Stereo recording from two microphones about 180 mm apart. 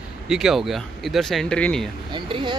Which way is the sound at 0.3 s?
5° right (ahead or behind).